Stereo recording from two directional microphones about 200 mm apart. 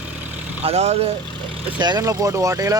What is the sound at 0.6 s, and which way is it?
Speech, 30° right (ahead or behind).